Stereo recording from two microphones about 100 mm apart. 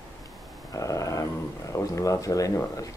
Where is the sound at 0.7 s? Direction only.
35° left (ahead or behind).